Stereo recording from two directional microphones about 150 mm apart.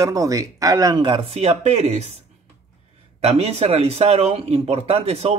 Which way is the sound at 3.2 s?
40° right (ahead or behind).